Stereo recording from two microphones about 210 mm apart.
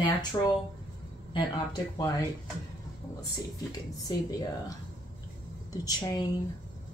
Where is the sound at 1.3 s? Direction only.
20° left (ahead or behind).